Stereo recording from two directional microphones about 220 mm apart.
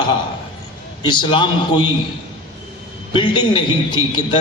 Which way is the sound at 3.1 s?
20° left (ahead or behind).